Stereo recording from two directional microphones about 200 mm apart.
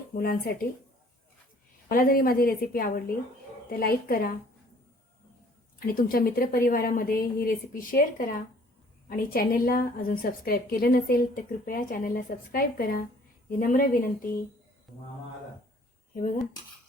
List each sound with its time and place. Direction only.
0.2 s a woman's voice: 50° left (ahead or behind)
1.9 s a woman's voice: 45° left (ahead or behind)
5.8 s a woman's voice: 45° left (ahead or behind)